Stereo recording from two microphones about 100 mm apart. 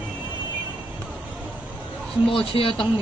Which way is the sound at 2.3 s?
60° left (ahead or behind).